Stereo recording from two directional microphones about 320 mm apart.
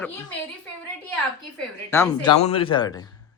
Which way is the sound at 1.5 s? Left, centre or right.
Centre.